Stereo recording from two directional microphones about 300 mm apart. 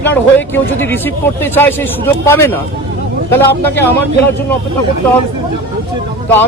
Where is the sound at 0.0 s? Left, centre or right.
Centre.